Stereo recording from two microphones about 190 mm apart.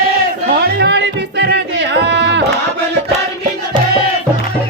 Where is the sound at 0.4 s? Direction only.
60° right (ahead or behind).